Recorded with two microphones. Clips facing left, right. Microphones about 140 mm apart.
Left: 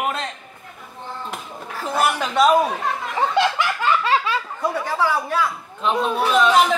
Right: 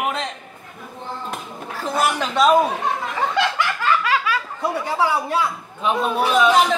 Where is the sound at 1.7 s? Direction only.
Centre (ahead or behind).